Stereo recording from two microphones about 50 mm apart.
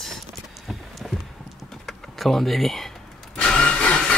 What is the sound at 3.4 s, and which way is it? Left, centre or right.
Vehicle, left.